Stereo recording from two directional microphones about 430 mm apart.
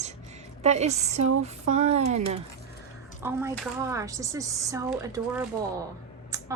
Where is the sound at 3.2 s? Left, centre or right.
Centre.